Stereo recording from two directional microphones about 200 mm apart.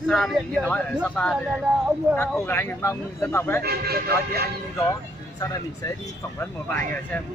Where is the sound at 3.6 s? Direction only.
50° right (ahead or behind).